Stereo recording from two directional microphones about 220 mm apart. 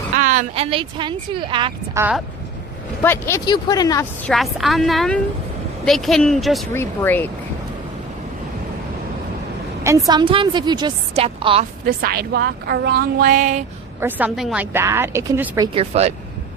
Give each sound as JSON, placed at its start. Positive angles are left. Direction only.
{"t": 0.2, "sound": "speech", "side_deg": -35}
{"t": 2.0, "sound": "speech", "side_deg": -5}
{"t": 3.0, "sound": "speech", "side_deg": 10}
{"t": 4.3, "sound": "a woman's voice", "side_deg": 0}
{"t": 10.1, "sound": "speech", "side_deg": -20}
{"t": 11.9, "sound": "a woman's voice", "side_deg": -45}
{"t": 14.0, "sound": "speech", "side_deg": -5}